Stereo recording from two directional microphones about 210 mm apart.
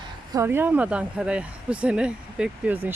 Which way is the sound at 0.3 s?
15° right (ahead or behind).